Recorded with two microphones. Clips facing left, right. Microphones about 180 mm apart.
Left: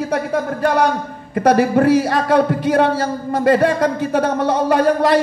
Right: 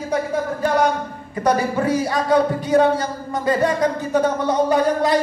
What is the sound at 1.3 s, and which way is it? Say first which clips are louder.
A man's voice: left 6 dB; 65° left (ahead or behind).